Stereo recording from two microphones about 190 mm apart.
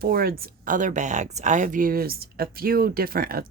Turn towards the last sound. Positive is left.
turn(degrees=-50)  # may be behind; listen again after turning